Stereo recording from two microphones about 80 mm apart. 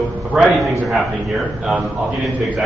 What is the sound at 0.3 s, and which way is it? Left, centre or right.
Speech, centre.